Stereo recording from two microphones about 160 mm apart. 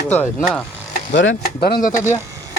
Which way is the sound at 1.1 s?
75° left (ahead or behind).